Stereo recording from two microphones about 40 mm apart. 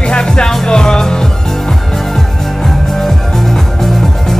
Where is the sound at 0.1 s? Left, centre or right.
Left.